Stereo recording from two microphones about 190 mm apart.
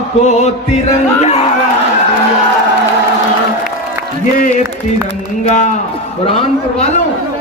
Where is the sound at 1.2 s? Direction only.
35° left (ahead or behind).